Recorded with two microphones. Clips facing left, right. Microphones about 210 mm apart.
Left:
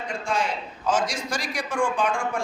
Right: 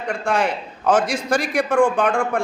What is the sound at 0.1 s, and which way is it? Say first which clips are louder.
A man's voice: right 7 dB; 65° right (ahead or behind).